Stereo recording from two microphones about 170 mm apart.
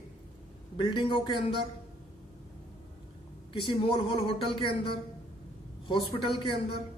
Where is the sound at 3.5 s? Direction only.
30° left (ahead or behind).